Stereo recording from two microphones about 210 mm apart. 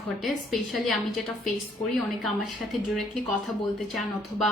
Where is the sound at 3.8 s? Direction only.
Centre (ahead or behind).